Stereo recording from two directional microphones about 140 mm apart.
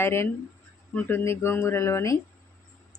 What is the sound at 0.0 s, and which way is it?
Speech, 15° left (ahead or behind).